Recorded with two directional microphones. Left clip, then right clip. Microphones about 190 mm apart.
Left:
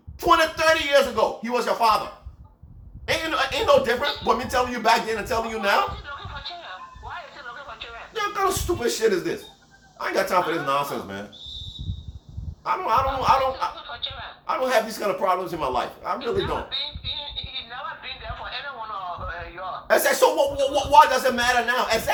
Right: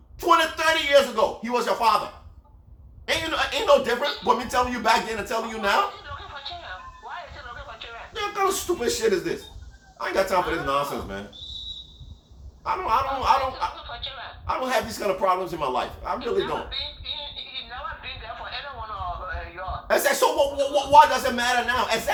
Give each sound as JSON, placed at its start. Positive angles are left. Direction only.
{"t": 0.2, "sound": "speech", "side_deg": 15}
{"t": 3.1, "sound": "speech", "side_deg": 15}
{"t": 7.0, "sound": "a sound", "side_deg": 10}
{"t": 8.1, "sound": "a man's voice", "side_deg": 20}
{"t": 12.6, "sound": "a man's voice", "side_deg": 20}
{"t": 14.4, "sound": "a man's voice", "side_deg": 20}
{"t": 17.5, "sound": "a sound", "side_deg": 10}
{"t": 19.9, "sound": "a man's voice", "side_deg": 20}